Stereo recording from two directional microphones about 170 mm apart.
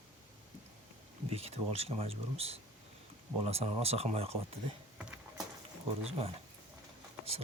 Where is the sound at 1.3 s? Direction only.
35° right (ahead or behind).